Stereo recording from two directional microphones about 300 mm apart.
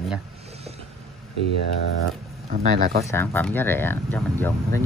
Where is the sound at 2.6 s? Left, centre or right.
Right.